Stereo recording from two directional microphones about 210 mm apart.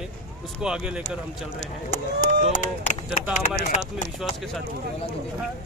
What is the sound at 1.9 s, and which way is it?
Speech, 40° left (ahead or behind).